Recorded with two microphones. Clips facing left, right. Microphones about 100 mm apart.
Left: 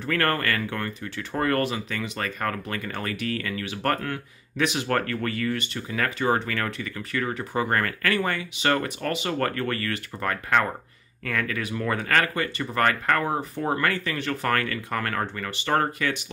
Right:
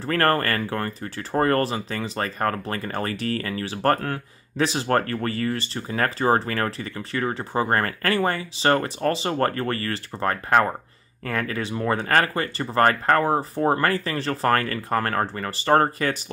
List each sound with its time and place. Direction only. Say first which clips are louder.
0.0 s speech: right 4 dB; 35° right (ahead or behind)